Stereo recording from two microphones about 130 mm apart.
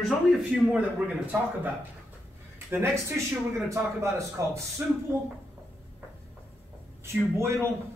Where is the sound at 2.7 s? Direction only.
20° right (ahead or behind).